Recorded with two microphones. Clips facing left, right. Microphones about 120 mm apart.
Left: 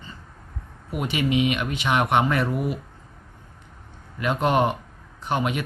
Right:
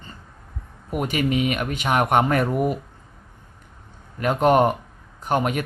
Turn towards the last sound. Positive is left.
turn(degrees=-45)  # may be behind; listen again after turning